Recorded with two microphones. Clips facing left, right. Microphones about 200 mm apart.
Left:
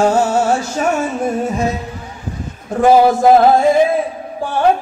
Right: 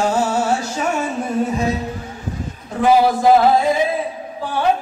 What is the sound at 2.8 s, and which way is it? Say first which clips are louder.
Music: left 4 dB; 45° left (ahead or behind).